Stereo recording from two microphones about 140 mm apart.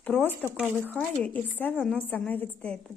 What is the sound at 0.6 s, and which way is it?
Speech, 10° right (ahead or behind).